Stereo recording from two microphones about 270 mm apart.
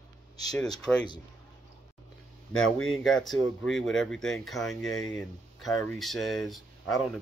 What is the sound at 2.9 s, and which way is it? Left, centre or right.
Speech, centre.